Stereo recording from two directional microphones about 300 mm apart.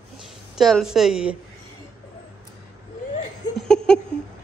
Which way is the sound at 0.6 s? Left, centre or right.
Centre.